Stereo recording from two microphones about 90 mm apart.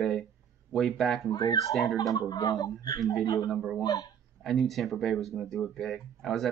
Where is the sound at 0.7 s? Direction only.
Centre (ahead or behind).